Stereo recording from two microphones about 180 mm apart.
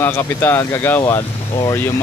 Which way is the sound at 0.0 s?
10° left (ahead or behind).